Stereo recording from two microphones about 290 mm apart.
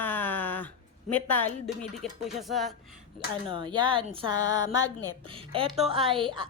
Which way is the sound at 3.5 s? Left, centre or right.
Centre.